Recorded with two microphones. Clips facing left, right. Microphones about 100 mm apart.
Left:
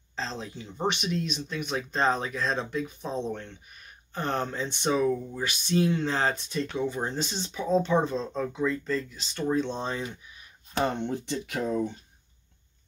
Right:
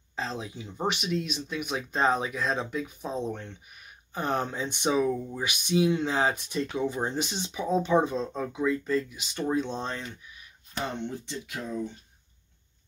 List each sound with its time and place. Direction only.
0.1 s speech: 10° right (ahead or behind); by 10.1 s 5° left (ahead or behind)
10.8 s speech: 60° left (ahead or behind)